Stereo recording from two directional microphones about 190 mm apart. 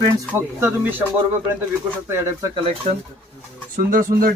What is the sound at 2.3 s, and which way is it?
Speech, 20° right (ahead or behind).